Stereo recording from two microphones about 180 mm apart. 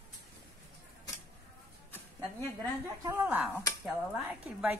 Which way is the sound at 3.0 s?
15° right (ahead or behind).